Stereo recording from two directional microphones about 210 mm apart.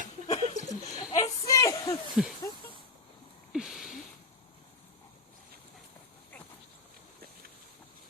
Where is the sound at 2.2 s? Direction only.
5° right (ahead or behind).